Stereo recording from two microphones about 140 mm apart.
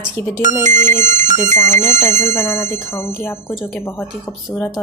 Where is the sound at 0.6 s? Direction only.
60° right (ahead or behind).